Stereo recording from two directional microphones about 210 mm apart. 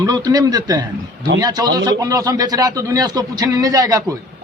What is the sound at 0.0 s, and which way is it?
A man's voice, 20° right (ahead or behind).